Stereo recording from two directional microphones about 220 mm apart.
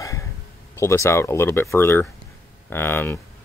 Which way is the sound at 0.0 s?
15° left (ahead or behind).